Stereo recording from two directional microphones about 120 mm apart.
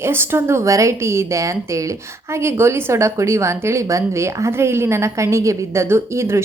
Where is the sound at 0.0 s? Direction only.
20° right (ahead or behind).